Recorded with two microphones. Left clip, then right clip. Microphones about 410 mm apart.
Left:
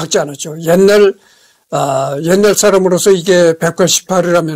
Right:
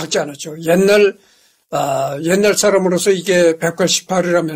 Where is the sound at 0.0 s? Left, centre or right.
Left.